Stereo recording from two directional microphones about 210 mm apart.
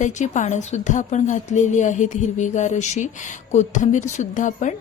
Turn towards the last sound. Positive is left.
turn(degrees=35)  # may be behind; listen again after turning